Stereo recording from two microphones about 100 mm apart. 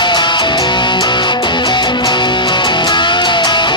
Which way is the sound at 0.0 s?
50° left (ahead or behind).